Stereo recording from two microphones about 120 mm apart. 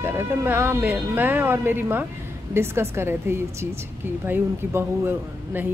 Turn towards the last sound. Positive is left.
turn(degrees=-15)  # may be behind; listen again after turning